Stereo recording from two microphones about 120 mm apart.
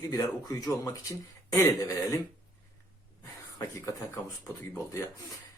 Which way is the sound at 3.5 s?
25° left (ahead or behind).